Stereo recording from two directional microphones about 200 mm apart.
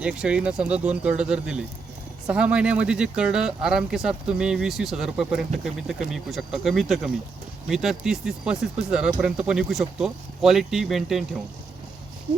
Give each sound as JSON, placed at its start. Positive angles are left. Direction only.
{"t": 0.0, "sound": "speech", "side_deg": -5}